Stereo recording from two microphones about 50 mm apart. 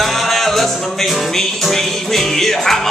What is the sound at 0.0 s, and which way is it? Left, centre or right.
Music, centre.